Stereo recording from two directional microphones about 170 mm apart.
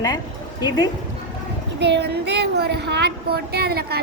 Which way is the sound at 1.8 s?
85° right.